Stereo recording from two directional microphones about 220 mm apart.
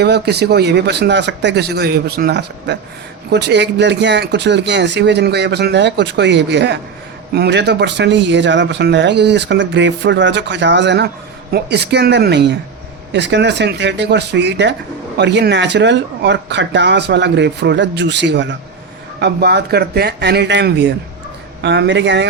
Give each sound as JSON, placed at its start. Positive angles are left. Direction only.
{"t": 0.0, "sound": "speech", "side_deg": -50}